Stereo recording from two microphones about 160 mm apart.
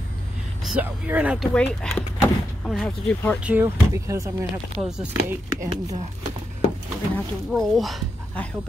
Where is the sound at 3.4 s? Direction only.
10° right (ahead or behind).